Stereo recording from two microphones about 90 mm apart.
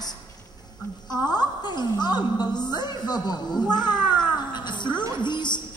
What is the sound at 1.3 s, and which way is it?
A woman's voice, 50° left (ahead or behind).